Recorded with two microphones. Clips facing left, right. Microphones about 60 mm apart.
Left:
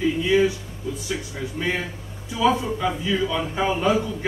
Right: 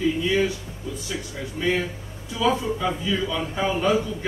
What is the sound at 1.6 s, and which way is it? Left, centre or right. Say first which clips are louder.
A man's voice: right 3 dB; centre.